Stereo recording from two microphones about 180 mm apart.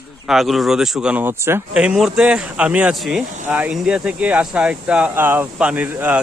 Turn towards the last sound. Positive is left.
turn(degrees=-10)  # may be behind; listen again after turning